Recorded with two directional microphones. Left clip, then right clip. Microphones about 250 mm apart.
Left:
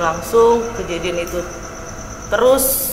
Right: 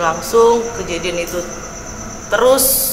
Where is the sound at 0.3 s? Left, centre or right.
Left.